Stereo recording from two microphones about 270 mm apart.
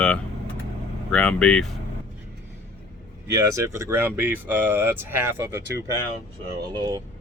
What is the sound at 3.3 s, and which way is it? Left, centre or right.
Speech, centre.